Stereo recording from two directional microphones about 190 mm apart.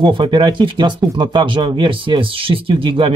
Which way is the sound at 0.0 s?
25° right (ahead or behind).